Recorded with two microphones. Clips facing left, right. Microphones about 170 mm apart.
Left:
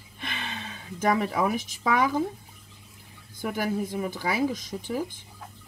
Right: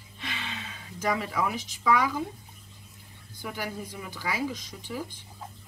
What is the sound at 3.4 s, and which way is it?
Speech, 50° left (ahead or behind).